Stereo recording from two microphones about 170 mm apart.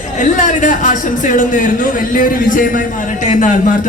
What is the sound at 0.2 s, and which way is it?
Speech, 45° left (ahead or behind).